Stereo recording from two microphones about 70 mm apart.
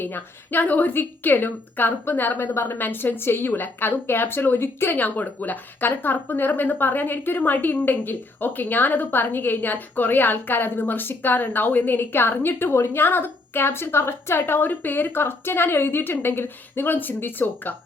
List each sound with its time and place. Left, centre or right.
0.0 s a woman's voice: left
5.0 s speech: left